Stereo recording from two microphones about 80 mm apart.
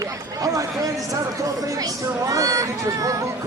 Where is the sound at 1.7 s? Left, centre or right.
Right.